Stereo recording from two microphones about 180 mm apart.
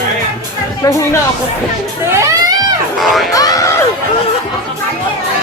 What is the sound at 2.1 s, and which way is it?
Music, 15° right (ahead or behind).